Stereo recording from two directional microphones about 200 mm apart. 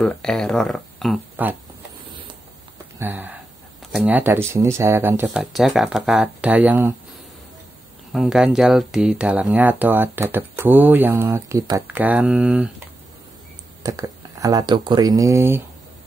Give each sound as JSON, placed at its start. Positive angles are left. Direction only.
{"t": 0.0, "sound": "speech", "side_deg": 5}
{"t": 1.3, "sound": "speech", "side_deg": -10}
{"t": 3.0, "sound": "speech", "side_deg": -10}
{"t": 8.1, "sound": "speech", "side_deg": -5}
{"t": 13.8, "sound": "speech", "side_deg": -15}